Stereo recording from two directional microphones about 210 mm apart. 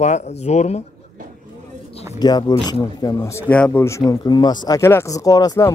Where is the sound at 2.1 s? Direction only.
20° left (ahead or behind).